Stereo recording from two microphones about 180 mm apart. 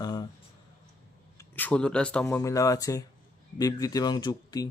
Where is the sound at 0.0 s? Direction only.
20° left (ahead or behind).